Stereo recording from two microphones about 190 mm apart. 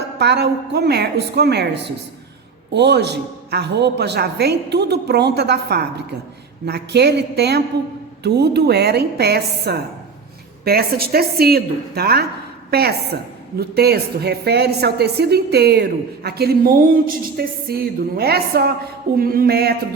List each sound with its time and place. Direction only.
0.2 s a woman's voice: 60° right (ahead or behind)
19.1 s music: 50° right (ahead or behind)